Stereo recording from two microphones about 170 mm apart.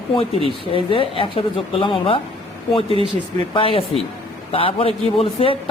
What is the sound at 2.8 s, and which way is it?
Speech, 35° right (ahead or behind).